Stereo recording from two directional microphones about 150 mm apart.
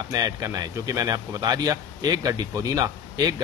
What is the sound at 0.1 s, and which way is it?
Speech, 25° right (ahead or behind).